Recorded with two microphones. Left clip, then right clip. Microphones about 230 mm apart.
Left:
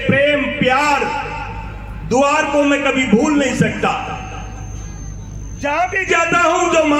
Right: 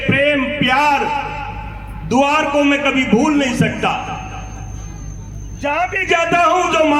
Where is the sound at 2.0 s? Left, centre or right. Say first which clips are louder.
Even; right.